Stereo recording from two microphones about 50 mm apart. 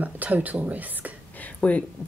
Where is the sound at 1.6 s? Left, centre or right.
Left.